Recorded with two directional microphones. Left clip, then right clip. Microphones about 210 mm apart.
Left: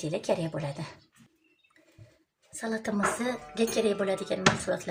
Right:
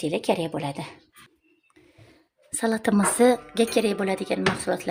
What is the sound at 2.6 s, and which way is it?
Speech, 50° right (ahead or behind).